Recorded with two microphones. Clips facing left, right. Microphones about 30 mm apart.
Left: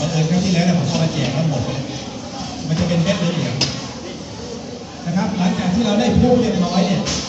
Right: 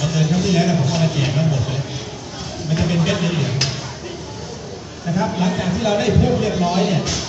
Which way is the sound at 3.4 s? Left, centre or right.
Left.